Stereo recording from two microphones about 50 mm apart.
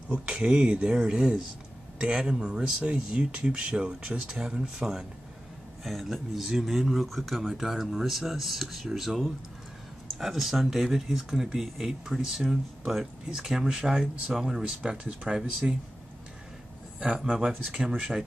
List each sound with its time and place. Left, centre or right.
0.1 s speech: right
5.9 s speech: centre
17.0 s speech: centre